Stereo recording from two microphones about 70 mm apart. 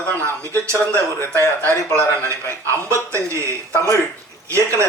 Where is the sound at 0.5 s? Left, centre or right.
Right.